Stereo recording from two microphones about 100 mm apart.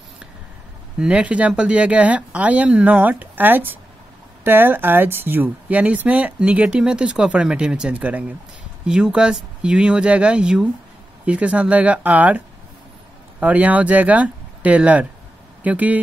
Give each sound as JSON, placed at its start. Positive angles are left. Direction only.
{"t": 0.9, "sound": "speech", "side_deg": -10}